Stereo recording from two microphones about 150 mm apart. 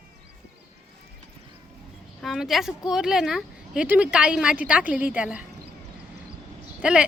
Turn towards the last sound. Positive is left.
turn(degrees=-5)  # may be behind; listen again after turning